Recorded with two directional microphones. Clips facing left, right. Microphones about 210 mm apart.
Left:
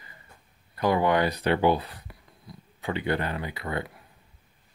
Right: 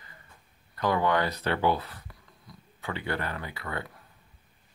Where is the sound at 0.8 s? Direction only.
15° left (ahead or behind).